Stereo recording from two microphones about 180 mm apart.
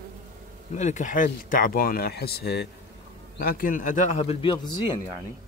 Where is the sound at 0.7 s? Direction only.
40° left (ahead or behind).